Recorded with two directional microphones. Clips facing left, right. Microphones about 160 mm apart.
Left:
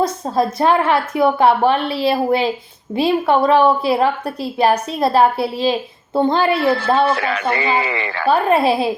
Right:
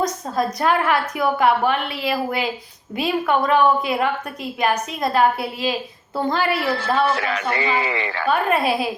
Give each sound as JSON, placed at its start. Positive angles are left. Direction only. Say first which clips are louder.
{"t": 0.0, "sound": "a woman's voice", "louder": "left 4 dB", "side_deg": 30}
{"t": 7.1, "sound": "speech", "louder": "left 4 dB", "side_deg": 60}
{"t": 8.3, "sound": "a woman's voice", "louder": "left 5 dB", "side_deg": 30}